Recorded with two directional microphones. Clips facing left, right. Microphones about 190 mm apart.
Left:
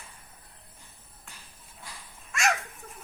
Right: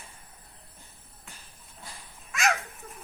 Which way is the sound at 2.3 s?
Centre (ahead or behind).